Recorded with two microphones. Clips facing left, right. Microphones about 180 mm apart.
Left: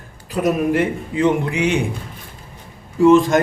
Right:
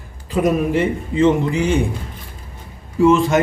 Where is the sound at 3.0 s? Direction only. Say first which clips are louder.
Left 2 dB; centre (ahead or behind).